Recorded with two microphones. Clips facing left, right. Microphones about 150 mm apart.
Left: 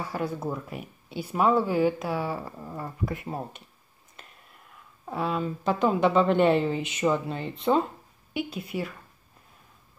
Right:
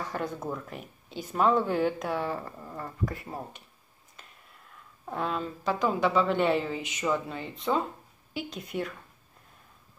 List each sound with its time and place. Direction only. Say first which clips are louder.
0.0 s speech: left 3 dB; 5° left (ahead or behind)
5.0 s speech: left 3 dB; 5° left (ahead or behind)
5.6 s speech: left 3 dB; 20° left (ahead or behind)
8.5 s speech: left 1 dB; 5° left (ahead or behind)